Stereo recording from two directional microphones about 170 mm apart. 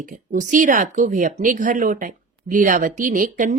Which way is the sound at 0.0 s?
50° right (ahead or behind).